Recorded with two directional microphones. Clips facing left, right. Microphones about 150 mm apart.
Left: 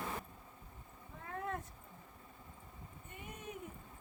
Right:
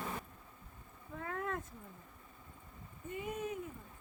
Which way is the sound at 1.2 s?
90° right.